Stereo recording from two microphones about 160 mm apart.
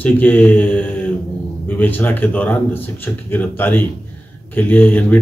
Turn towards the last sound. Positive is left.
turn(degrees=10)  # may be behind; listen again after turning